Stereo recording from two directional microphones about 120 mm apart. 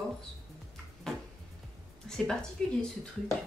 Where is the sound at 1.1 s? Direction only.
5° left (ahead or behind).